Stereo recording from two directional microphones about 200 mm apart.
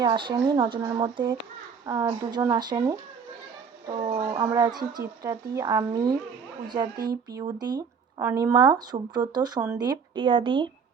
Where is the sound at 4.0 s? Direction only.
30° right (ahead or behind).